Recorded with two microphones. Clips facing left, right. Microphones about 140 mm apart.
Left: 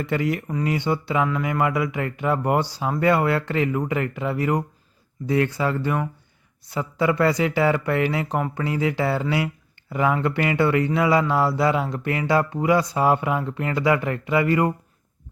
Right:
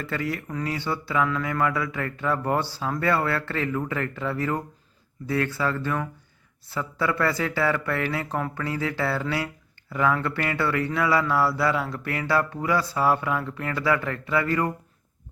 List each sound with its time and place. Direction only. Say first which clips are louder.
0.0 s speech: left 5 dB; 20° left (ahead or behind)